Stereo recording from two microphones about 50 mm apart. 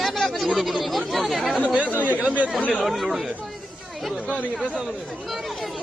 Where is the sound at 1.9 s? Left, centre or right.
Right.